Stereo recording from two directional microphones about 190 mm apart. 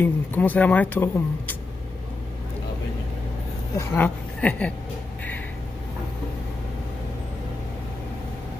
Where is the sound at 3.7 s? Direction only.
10° left (ahead or behind).